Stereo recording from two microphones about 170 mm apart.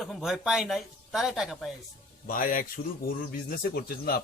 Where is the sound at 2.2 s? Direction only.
55° left (ahead or behind).